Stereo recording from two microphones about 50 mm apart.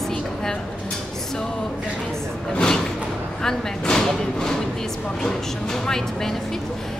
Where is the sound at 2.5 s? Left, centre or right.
Centre.